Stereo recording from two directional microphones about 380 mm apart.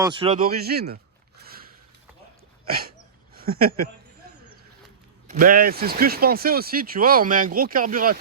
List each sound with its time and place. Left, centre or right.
0.0 s speech: centre
1.4 s a sound: right
2.6 s dog: right
3.3 s speech: right
5.3 s speech: right